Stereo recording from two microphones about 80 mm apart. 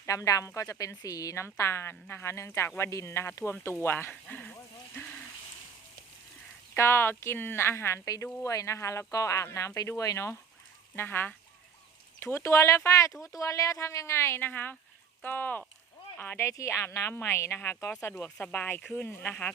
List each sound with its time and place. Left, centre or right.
0.0 s a woman's voice: left; by 4.5 s centre
6.7 s a woman's voice: left
10.9 s a woman's voice: left
16.4 s a woman's voice: left
18.3 s speech: centre